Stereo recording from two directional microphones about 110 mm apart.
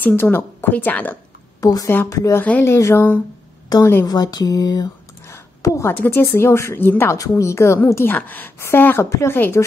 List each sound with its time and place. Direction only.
0.0 s a woman's voice: 15° left (ahead or behind)
1.6 s speech: 30° left (ahead or behind)
2.3 s a woman's voice: 15° left (ahead or behind)